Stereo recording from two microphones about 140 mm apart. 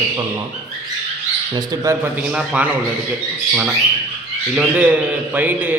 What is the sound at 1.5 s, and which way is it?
Speech, 30° right (ahead or behind).